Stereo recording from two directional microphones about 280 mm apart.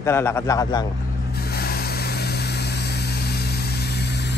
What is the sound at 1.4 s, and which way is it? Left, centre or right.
Vehicle, left.